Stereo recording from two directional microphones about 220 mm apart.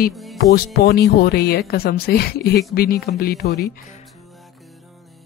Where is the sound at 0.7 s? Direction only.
50° left (ahead or behind).